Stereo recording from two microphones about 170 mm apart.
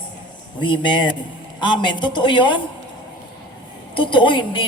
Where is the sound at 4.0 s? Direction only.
30° left (ahead or behind).